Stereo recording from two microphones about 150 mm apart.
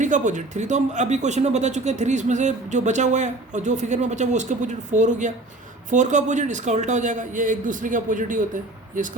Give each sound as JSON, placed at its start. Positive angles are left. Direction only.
{"t": 0.0, "sound": "a man's voice", "side_deg": -55}